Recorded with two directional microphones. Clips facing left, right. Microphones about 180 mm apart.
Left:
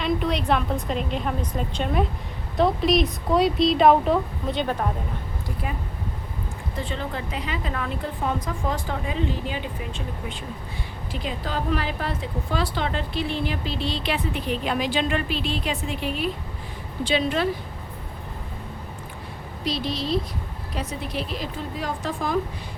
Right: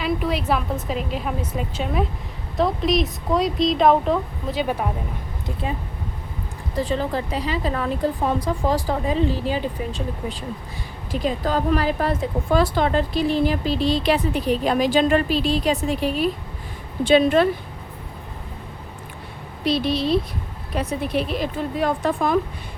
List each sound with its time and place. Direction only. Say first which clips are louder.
0.0 s speech: right 1 dB; 5° right (ahead or behind)
6.7 s a woman's voice: right 8 dB; 35° right (ahead or behind)
17.0 s speech: right 7 dB; 50° right (ahead or behind)
19.6 s a woman's voice: right 6 dB; 60° right (ahead or behind)